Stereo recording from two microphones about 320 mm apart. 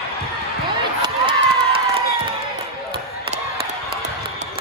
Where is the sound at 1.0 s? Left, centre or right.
Centre.